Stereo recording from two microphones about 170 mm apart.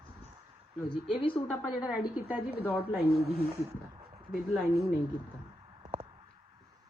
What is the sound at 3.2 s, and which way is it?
Speech, 35° right (ahead or behind).